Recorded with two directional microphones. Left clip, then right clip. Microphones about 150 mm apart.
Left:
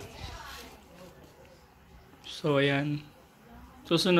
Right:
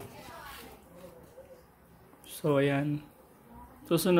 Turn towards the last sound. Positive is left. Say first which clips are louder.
# left 2 dB
turn(degrees=-5)  # may be behind; listen again after turning